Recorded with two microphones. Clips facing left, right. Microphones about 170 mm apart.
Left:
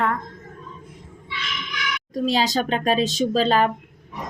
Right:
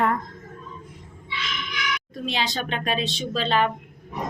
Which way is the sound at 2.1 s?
40° left (ahead or behind).